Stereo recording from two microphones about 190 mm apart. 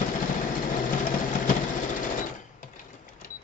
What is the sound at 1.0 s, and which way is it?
Sewing machine, 40° left (ahead or behind).